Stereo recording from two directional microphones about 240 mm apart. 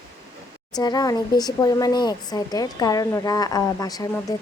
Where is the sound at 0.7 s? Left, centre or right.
Centre.